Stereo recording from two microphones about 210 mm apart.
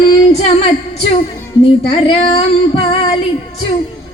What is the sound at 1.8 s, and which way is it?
Female singing, 25° left (ahead or behind).